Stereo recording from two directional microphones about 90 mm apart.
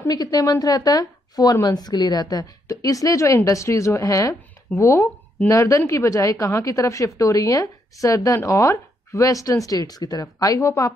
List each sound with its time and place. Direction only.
0.1 s a woman's voice: 45° left (ahead or behind)